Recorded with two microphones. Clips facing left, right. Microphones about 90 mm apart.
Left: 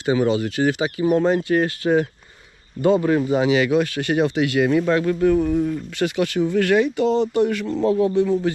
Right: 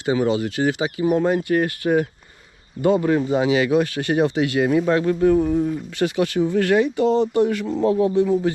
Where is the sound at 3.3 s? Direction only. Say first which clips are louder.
Even; 25° right (ahead or behind).